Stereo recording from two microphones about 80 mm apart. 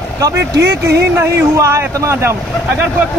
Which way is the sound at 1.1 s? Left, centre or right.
Right.